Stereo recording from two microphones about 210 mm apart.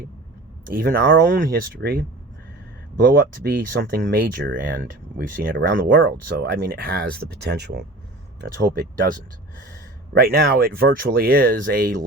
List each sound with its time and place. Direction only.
0.6 s speech: 45° right (ahead or behind)
5.9 s speech: 55° right (ahead or behind)
10.2 s speech: 45° right (ahead or behind)